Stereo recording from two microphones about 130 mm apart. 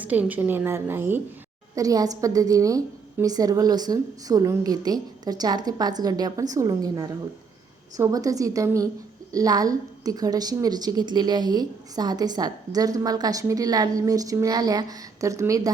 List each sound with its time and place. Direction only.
0.0 s a woman's voice: 10° right (ahead or behind)
1.7 s a woman's voice: 25° right (ahead or behind)